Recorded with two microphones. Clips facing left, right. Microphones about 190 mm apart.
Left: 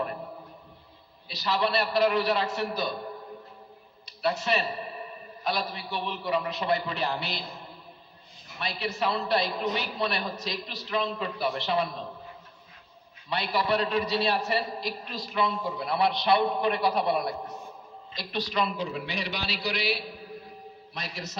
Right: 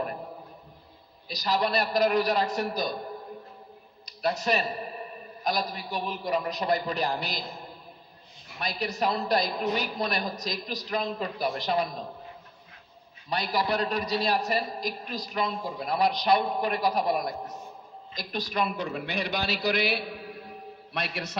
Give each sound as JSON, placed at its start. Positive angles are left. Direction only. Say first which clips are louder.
{"t": 1.3, "sound": "a man's voice", "louder": "even", "side_deg": -40}
{"t": 4.0, "sound": "a sound", "louder": "right 1 dB", "side_deg": -40}
{"t": 5.4, "sound": "a man's voice", "louder": "right 1 dB", "side_deg": -40}
{"t": 13.3, "sound": "a man's voice", "louder": "left 1 dB", "side_deg": -40}